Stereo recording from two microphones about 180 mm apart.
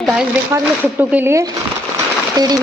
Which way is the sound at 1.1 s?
15° right (ahead or behind).